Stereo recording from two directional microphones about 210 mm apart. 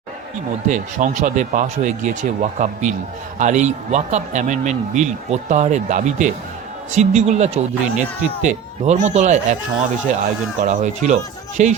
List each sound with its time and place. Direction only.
0.7 s speech: 35° right (ahead or behind)
10.6 s speech: 35° right (ahead or behind)